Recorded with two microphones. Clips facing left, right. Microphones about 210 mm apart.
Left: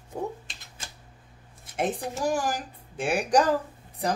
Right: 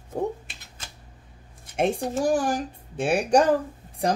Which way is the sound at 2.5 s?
25° right (ahead or behind).